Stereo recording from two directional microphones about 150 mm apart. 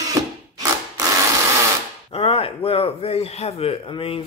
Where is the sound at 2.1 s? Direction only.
40° left (ahead or behind).